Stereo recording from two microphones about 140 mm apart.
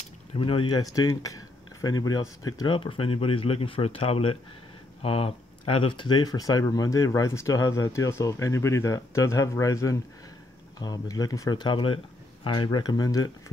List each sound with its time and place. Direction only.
0.4 s speech: 40° left (ahead or behind)